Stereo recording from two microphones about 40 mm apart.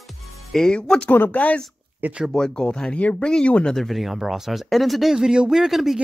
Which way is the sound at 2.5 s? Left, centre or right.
Left.